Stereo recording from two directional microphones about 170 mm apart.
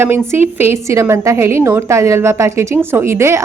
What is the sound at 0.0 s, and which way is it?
A woman's voice, 15° right (ahead or behind).